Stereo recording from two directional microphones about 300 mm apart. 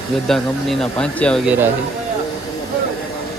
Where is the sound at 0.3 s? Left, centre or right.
Centre.